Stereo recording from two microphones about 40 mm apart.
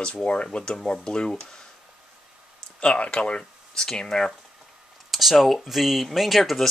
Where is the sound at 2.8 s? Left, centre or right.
Left.